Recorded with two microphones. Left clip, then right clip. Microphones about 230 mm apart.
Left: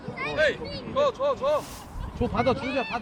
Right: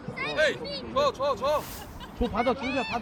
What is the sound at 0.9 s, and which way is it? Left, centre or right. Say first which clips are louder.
Speech: left 2 dB; right.